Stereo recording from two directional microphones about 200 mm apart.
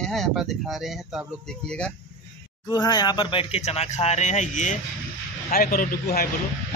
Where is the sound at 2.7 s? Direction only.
20° left (ahead or behind).